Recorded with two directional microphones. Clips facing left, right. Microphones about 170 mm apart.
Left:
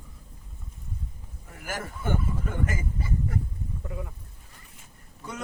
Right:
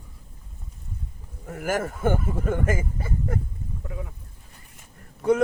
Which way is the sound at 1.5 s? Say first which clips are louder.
Right 10 dB; 50° right (ahead or behind).